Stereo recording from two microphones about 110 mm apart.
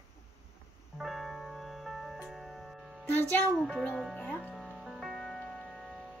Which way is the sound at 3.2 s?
20° left (ahead or behind).